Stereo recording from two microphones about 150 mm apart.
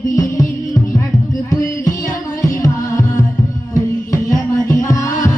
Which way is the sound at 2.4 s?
20° left (ahead or behind).